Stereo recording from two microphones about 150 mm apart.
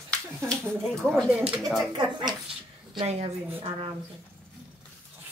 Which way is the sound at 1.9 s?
30° right (ahead or behind).